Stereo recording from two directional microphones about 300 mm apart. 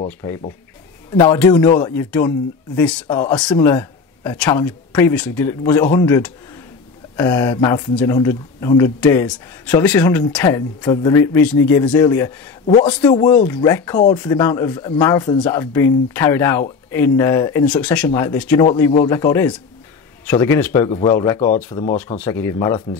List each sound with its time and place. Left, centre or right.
0.0 s speech: centre